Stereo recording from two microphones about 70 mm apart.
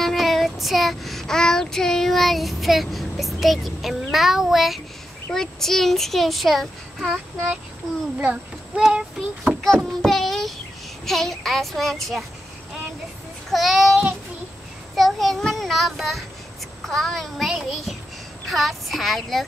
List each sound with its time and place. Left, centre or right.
0.0 s child singing: centre
5.3 s a child's voice: centre
8.2 s a child's voice: centre
8.8 s child singing: centre
9.8 s child singing: centre
11.1 s a child's voice: centre
13.5 s a child's voice: centre
15.0 s a child's voice: centre